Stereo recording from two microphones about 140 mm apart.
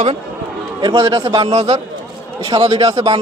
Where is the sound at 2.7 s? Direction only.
45° right (ahead or behind).